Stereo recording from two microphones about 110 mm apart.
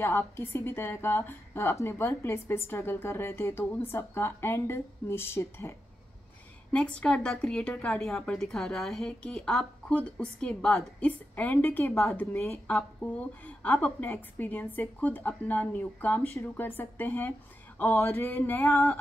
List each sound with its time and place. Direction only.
0.0 s a woman's voice: 20° left (ahead or behind)
6.7 s a woman's voice: 10° left (ahead or behind)